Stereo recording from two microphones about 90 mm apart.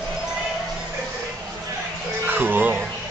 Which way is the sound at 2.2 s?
20° right (ahead or behind).